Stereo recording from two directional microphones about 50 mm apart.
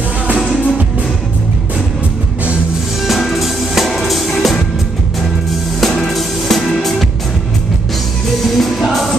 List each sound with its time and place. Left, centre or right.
0.4 s music: centre
3.1 s music: centre
5.8 s music: centre
8.5 s music: centre